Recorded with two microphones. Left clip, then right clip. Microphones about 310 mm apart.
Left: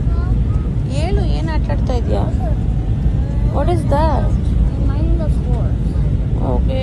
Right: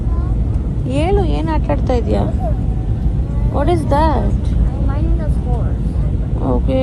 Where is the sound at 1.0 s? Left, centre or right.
Right.